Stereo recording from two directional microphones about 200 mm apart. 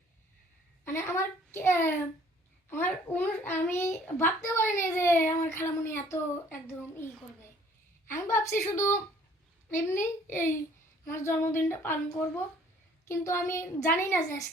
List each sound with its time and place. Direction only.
0.9 s a child's voice: 15° left (ahead or behind)
13.1 s a child's voice: 15° left (ahead or behind)